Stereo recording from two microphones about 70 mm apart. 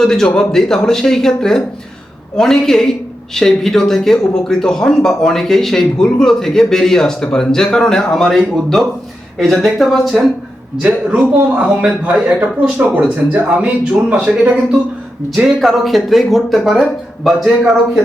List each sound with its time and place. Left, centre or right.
0.0 s speech: centre
10.8 s a man's voice: centre
15.4 s speech: centre